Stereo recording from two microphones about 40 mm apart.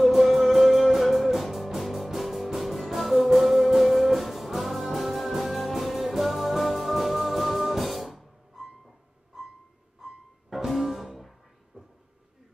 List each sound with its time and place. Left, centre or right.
0.0 s music: centre
10.0 s music: centre
11.7 s a sound: centre